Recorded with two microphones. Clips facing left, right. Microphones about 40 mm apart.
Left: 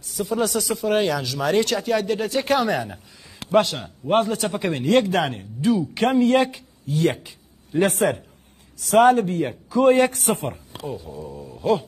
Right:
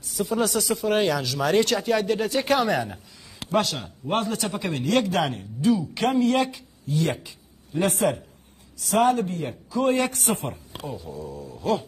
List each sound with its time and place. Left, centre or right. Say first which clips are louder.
0.0 s speech: left 1 dB; centre
4.3 s a man's voice: left 3 dB; centre
4.6 s speech: left 4 dB; left
7.1 s a sound: left 4 dB; left
7.9 s a man's voice: left 2 dB; left
10.9 s a man's voice: left 3 dB; centre
11.1 s a man's voice: left 1 dB; centre